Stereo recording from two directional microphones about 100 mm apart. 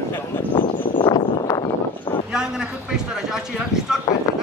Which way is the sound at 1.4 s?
45° left (ahead or behind).